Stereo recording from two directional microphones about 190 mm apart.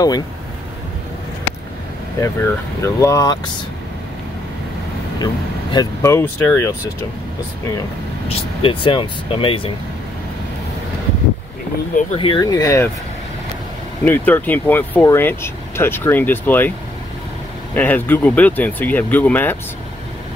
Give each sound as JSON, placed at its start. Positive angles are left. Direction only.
{"t": 2.1, "sound": "speech", "side_deg": 15}
{"t": 5.2, "sound": "speech", "side_deg": 20}
{"t": 8.3, "sound": "speech", "side_deg": 30}
{"t": 12.1, "sound": "speech", "side_deg": 25}
{"t": 14.0, "sound": "speech", "side_deg": 10}
{"t": 17.7, "sound": "speech", "side_deg": 10}